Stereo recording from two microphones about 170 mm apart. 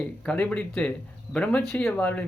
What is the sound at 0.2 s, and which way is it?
Speech, 5° left (ahead or behind).